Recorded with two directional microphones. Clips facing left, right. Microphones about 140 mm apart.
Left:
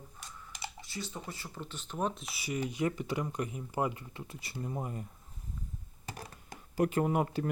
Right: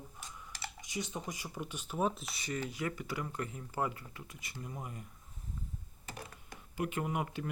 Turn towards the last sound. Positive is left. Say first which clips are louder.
# left 6 dB
turn(degrees=35)  # may be behind; listen again after turning